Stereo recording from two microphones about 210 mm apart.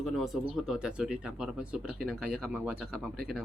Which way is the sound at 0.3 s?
Centre (ahead or behind).